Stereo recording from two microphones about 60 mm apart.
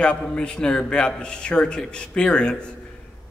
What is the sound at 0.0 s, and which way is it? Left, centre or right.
A man's voice, centre.